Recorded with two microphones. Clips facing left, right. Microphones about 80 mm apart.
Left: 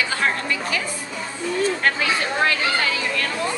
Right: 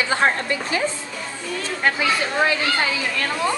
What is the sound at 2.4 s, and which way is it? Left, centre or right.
Speech, centre.